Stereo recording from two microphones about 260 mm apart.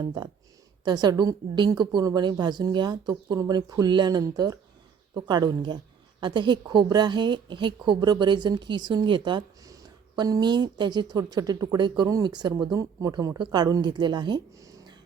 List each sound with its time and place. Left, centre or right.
0.9 s a woman's voice: centre